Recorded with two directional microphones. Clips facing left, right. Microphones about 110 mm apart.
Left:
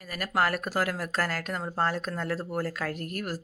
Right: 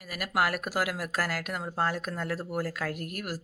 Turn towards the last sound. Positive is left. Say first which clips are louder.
# left 2 dB
turn(degrees=-5)  # may be behind; listen again after turning